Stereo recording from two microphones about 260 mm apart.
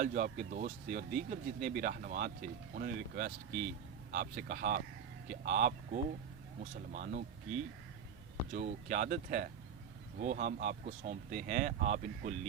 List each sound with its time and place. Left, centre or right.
0.0 s speech: right
8.5 s speech: right